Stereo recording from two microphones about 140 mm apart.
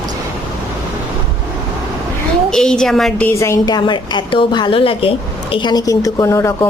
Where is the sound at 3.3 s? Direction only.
20° left (ahead or behind).